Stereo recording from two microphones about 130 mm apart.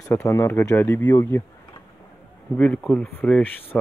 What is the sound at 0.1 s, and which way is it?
Speech, 25° left (ahead or behind).